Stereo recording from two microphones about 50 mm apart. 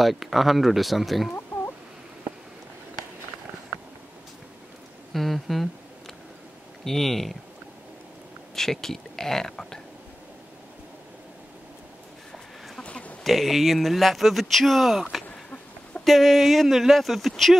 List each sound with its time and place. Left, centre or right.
0.0 s speech: centre
5.1 s a sound: centre
6.8 s speech: centre
8.5 s speech: centre
12.8 s a sound: left
13.2 s speech: centre